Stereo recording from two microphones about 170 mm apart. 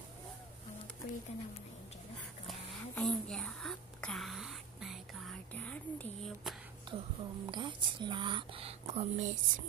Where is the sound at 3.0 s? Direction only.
Centre (ahead or behind).